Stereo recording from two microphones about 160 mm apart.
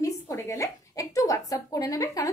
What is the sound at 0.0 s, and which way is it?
Speech, 20° left (ahead or behind).